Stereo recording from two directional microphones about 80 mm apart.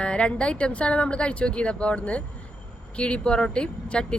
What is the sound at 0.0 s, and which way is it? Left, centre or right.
A woman's voice, centre.